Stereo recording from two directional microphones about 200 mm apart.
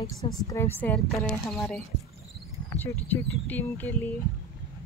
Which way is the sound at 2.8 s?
10° left (ahead or behind).